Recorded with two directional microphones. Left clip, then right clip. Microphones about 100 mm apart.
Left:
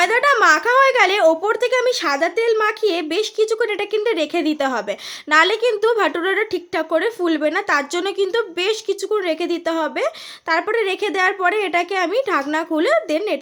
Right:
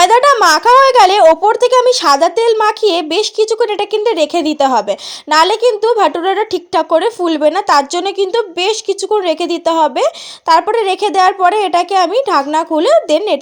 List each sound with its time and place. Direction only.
0.0 s speech: 45° right (ahead or behind)
0.4 s speech: 35° right (ahead or behind)